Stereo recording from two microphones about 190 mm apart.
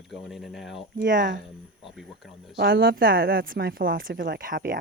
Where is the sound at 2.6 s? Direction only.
50° right (ahead or behind).